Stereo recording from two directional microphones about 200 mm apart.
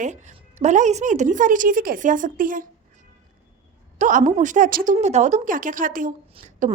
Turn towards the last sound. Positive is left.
turn(degrees=-40)  # may be behind; listen again after turning